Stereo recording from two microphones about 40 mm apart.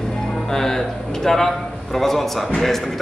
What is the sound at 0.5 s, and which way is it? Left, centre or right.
Speech, centre.